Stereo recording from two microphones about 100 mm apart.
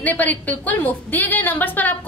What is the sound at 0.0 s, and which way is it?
A woman's voice, 15° left (ahead or behind).